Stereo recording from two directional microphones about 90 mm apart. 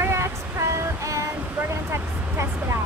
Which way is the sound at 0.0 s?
30° right (ahead or behind).